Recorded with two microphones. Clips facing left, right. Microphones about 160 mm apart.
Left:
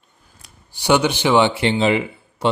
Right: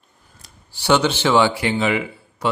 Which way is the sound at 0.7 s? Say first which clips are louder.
Left 1 dB; 15° left (ahead or behind).